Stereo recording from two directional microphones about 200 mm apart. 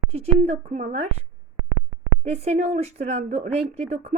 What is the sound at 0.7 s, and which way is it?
Speech, 35° right (ahead or behind).